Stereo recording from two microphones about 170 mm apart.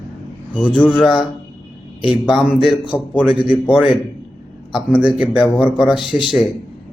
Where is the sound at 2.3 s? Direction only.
Centre (ahead or behind).